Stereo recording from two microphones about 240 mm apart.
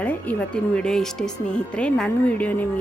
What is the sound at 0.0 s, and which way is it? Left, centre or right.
A woman's voice, centre.